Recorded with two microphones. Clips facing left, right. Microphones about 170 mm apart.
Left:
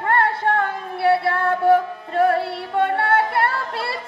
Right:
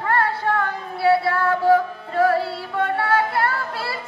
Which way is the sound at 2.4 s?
25° left (ahead or behind).